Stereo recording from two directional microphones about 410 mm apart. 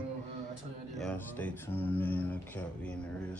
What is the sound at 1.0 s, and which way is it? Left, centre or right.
Speech, centre.